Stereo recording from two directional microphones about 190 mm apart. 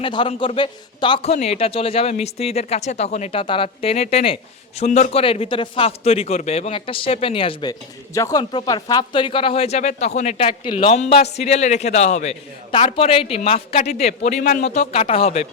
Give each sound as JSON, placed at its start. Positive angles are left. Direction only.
{"t": 0.0, "sound": "a man's voice", "side_deg": 25}